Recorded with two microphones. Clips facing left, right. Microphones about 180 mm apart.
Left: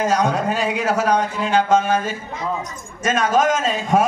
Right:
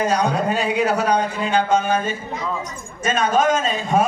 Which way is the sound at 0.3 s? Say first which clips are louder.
Even; 90° left.